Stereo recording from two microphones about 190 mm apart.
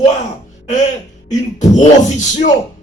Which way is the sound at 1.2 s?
40° left (ahead or behind).